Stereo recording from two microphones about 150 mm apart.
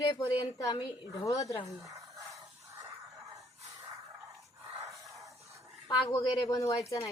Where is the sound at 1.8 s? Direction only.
20° right (ahead or behind).